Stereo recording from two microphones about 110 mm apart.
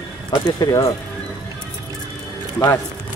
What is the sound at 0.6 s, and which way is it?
Speech, 30° left (ahead or behind).